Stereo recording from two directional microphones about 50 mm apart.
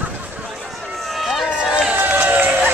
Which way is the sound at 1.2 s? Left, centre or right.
Centre.